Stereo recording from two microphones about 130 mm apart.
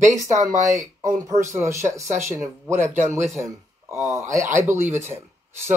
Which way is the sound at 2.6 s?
65° right (ahead or behind).